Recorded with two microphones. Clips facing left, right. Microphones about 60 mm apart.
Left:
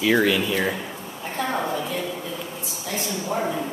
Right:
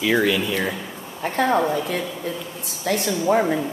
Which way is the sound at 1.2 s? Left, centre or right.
Right.